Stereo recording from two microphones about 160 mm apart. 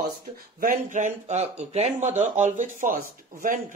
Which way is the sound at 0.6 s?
60° right (ahead or behind).